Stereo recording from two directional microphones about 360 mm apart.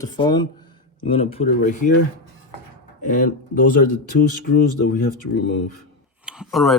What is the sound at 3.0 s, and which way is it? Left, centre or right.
Speech, left.